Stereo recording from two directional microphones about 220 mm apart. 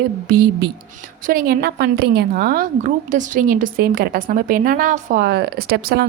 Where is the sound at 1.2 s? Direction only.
40° right (ahead or behind).